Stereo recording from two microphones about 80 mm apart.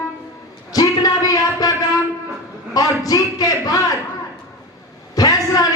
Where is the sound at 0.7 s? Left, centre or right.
Left.